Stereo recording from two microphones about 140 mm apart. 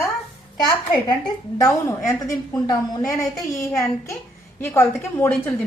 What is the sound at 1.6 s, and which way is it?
A woman's voice, 25° left (ahead or behind).